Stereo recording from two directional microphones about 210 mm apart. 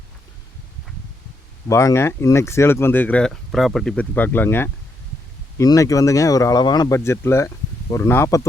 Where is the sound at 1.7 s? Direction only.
15° left (ahead or behind).